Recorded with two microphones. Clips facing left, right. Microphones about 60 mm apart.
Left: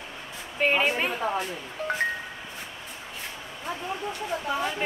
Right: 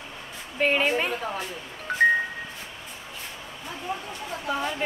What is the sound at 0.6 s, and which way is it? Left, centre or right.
Speech, centre.